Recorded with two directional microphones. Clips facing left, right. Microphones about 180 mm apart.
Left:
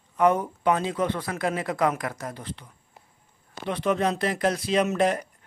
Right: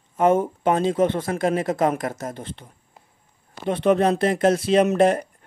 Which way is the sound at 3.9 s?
55° right (ahead or behind).